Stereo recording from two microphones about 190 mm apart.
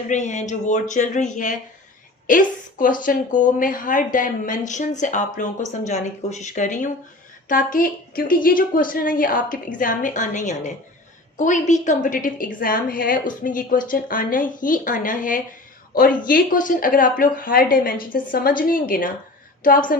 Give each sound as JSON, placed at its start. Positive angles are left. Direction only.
{"t": 0.1, "sound": "a woman's voice", "side_deg": 40}